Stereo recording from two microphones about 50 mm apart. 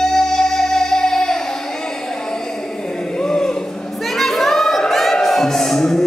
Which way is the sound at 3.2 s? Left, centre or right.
Centre.